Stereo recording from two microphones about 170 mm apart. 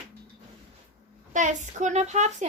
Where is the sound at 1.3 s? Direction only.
45° right (ahead or behind).